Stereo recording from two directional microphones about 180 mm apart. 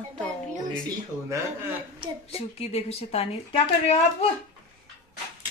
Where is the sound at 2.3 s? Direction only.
35° left (ahead or behind).